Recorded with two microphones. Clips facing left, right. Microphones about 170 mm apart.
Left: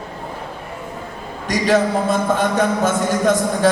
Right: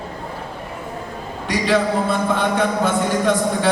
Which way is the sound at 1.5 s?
45° left (ahead or behind).